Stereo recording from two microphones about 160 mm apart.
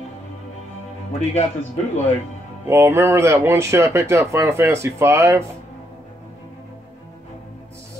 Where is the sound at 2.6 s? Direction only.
15° right (ahead or behind).